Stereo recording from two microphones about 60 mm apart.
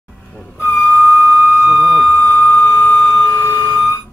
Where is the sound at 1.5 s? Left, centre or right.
Centre.